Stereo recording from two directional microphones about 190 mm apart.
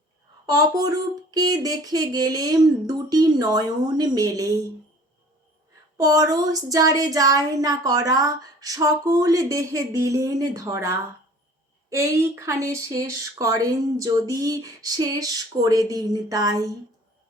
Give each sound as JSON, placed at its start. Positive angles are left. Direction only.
{"t": 0.4, "sound": "speech", "side_deg": -20}
{"t": 6.0, "sound": "speech", "side_deg": -20}